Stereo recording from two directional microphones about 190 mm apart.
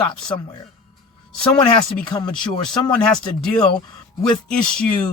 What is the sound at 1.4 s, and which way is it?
Speech, 5° left (ahead or behind).